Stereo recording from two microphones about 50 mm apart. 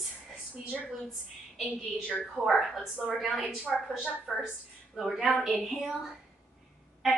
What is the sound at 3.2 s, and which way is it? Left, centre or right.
A woman's voice, centre.